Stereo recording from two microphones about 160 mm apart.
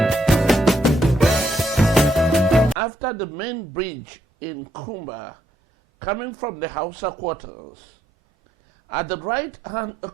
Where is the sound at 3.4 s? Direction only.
15° right (ahead or behind).